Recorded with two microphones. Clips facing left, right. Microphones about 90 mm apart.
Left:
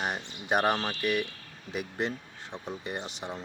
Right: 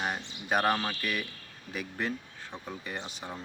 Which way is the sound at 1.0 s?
65° left (ahead or behind).